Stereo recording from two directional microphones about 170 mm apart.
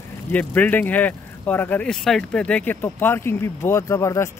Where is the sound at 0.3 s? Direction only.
10° left (ahead or behind).